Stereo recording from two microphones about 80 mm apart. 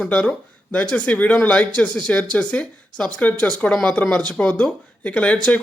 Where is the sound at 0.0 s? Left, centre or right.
Centre.